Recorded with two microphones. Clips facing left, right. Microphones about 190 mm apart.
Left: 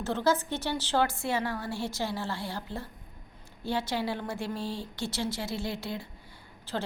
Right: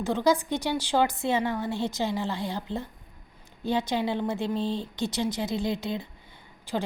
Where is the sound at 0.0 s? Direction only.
15° right (ahead or behind).